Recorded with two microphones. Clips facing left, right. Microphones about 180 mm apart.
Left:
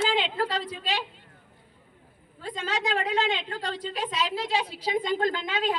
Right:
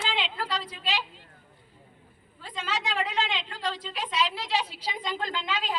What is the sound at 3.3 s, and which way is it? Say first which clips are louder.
Speech: left 1 dB; 55° left (ahead or behind).